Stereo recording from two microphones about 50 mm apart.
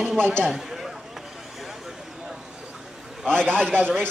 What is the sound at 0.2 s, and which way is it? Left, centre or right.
Speech, right.